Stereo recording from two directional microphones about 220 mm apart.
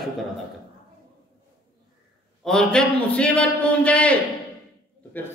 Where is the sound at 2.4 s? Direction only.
5° left (ahead or behind).